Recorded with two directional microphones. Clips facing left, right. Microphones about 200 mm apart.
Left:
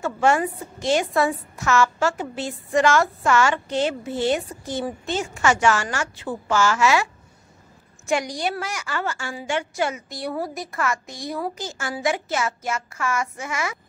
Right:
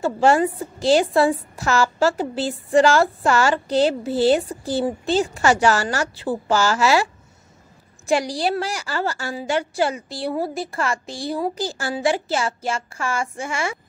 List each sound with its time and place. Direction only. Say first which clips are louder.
0.0 s a woman's voice: right 3 dB; 30° right (ahead or behind)
8.1 s a woman's voice: right 4 dB; 35° right (ahead or behind)